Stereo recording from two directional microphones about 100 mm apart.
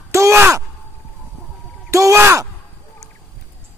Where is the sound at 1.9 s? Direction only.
30° right (ahead or behind).